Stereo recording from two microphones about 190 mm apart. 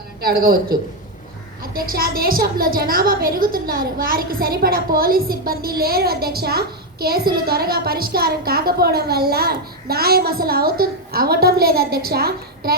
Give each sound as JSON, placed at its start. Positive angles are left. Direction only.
{"t": 0.2, "sound": "a woman's voice", "side_deg": -55}